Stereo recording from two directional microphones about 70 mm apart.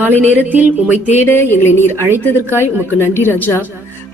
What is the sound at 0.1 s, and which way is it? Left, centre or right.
Speech, left.